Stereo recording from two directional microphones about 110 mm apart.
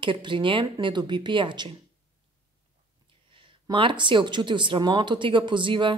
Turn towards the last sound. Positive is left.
turn(degrees=-50)  # may be behind; listen again after turning